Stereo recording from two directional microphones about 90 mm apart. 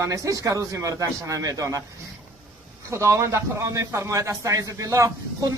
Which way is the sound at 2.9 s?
35° right (ahead or behind).